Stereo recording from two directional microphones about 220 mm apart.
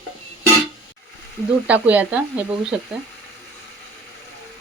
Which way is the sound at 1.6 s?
5° right (ahead or behind).